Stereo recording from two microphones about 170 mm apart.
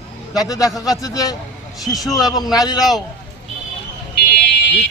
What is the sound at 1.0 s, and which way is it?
Speech, 20° left (ahead or behind).